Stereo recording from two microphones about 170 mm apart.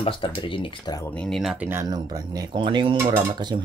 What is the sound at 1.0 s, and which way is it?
Speech, 5° left (ahead or behind).